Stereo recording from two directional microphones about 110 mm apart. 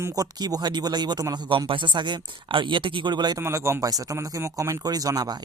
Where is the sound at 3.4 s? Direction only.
25° right (ahead or behind).